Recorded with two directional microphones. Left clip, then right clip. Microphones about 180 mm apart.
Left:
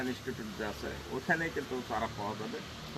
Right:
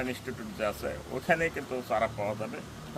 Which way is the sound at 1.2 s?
35° right (ahead or behind).